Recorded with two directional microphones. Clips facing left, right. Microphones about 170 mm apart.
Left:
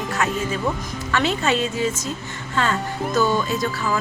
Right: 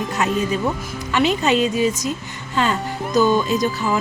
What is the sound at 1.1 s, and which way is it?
Speech, 15° right (ahead or behind).